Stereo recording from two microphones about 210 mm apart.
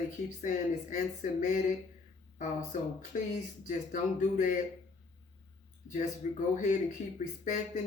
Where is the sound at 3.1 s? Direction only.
35° left (ahead or behind).